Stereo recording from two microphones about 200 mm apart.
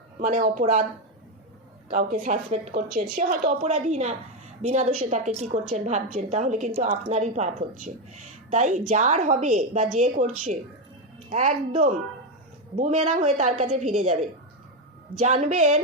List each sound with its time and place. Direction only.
0.2 s a woman's voice: 40° right (ahead or behind)
1.9 s a woman's voice: 40° right (ahead or behind)
15.3 s a woman's voice: 35° right (ahead or behind)